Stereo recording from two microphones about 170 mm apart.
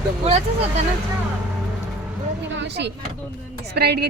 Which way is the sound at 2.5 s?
90° right.